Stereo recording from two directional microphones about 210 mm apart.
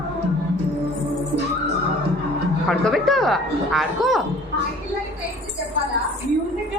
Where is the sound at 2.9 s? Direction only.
Centre (ahead or behind).